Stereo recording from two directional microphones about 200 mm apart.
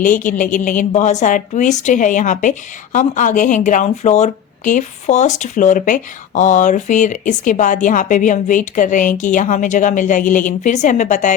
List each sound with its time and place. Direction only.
0.0 s a woman's voice: 40° left (ahead or behind)